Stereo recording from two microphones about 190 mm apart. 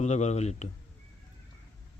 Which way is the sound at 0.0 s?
35° left (ahead or behind).